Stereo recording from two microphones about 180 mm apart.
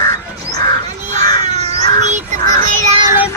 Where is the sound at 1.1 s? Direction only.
40° right (ahead or behind).